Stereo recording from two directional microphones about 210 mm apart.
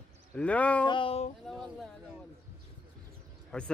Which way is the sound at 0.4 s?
5° left (ahead or behind).